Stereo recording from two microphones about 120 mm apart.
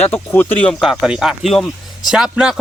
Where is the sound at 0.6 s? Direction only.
5° left (ahead or behind).